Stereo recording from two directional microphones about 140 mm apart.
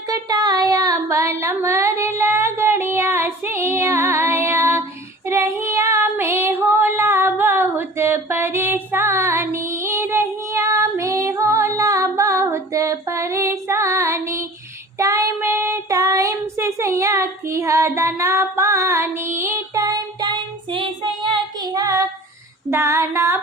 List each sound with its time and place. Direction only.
0.1 s a sound: 25° right (ahead or behind)
5.2 s female singing: 20° right (ahead or behind)
14.9 s child singing: 25° right (ahead or behind)
21.6 s female singing: 25° right (ahead or behind)